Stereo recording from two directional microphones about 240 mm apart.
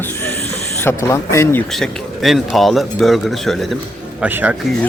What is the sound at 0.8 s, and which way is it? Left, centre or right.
A man's voice, centre.